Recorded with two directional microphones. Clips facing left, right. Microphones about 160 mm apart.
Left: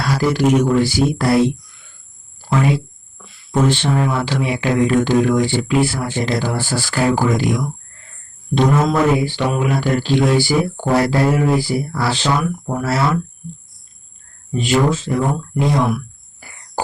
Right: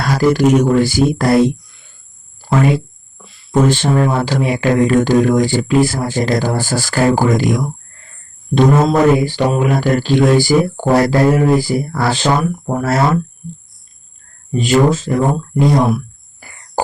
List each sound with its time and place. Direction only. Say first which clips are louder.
0.0 s speech: right 4 dB; 45° right (ahead or behind)
8.8 s speech: right 4 dB; 30° right (ahead or behind)
9.1 s speech: right 4 dB; 40° right (ahead or behind)
14.5 s speech: right 4 dB; 40° right (ahead or behind)